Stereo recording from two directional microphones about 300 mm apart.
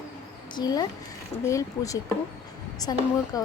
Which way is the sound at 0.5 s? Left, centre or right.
Centre.